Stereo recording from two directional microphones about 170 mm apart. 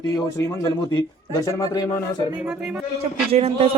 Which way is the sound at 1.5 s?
20° left (ahead or behind).